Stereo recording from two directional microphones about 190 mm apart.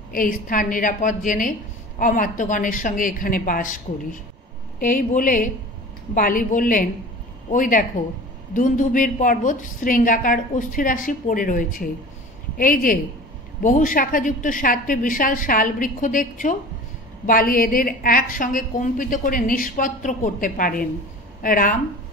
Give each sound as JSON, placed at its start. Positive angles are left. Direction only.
{"t": 0.1, "sound": "a woman's voice", "side_deg": 45}